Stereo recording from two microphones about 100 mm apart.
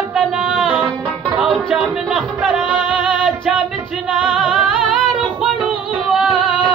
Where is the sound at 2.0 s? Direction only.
10° right (ahead or behind).